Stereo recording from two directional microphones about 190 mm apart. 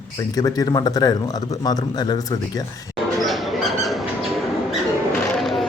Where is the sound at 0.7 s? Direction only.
20° left (ahead or behind).